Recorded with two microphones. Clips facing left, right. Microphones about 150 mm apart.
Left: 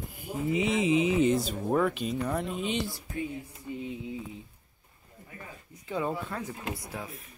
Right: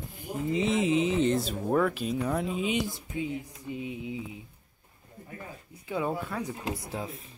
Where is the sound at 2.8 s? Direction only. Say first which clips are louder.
Right 2 dB; 20° right (ahead or behind).